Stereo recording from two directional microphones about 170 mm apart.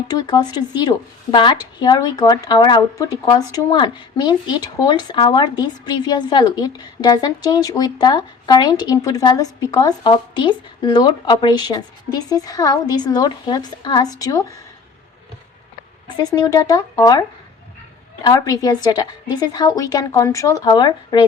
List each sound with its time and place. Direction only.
0.1 s a woman's voice: 25° left (ahead or behind)
16.0 s a woman's voice: 25° left (ahead or behind)